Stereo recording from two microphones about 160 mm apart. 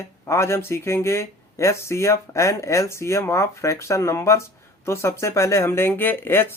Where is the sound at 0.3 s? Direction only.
15° left (ahead or behind).